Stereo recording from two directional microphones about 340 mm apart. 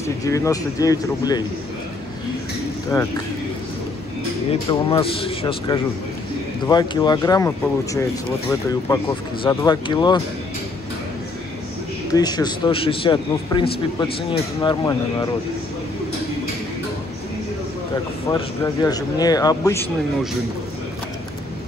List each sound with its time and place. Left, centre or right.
0.0 s speech: centre
4.5 s speech: centre
12.1 s speech: centre
18.3 s speech: centre